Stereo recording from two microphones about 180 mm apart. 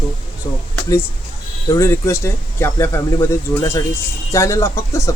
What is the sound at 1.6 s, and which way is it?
Speech, 20° left (ahead or behind).